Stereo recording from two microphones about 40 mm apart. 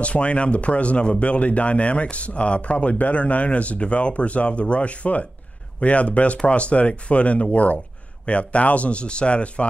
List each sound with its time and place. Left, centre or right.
0.0 s speech: left